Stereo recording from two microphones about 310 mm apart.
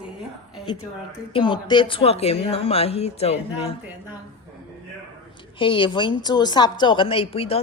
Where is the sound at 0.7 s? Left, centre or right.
Centre.